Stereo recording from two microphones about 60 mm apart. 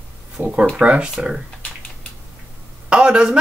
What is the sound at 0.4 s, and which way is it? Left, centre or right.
Speech, right.